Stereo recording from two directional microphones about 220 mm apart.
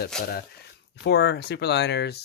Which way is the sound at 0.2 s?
45° left (ahead or behind).